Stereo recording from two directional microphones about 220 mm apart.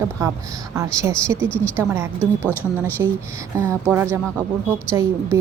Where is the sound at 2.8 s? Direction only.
10° left (ahead or behind).